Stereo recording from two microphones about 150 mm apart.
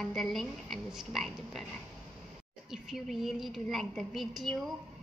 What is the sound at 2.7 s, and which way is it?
A woman's voice, centre (ahead or behind).